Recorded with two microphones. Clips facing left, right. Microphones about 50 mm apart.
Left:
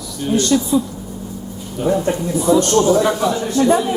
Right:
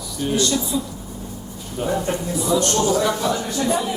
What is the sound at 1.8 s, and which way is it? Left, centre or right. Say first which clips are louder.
A man's voice: left 6 dB; left.